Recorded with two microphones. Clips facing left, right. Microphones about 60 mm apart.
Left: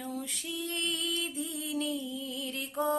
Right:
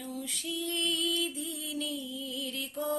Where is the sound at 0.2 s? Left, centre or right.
Left.